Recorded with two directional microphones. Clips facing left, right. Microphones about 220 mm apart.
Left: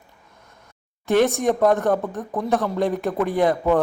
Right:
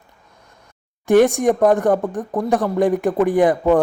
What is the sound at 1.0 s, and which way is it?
Speech, 15° right (ahead or behind).